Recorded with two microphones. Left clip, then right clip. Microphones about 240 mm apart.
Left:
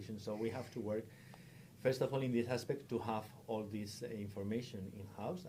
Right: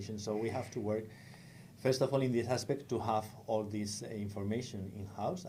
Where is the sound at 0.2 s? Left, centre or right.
Right.